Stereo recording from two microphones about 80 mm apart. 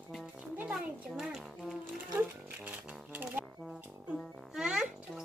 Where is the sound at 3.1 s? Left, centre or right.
Right.